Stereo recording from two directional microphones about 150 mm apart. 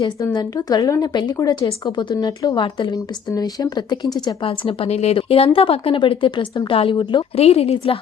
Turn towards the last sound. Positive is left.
turn(degrees=40)  # may be behind; listen again after turning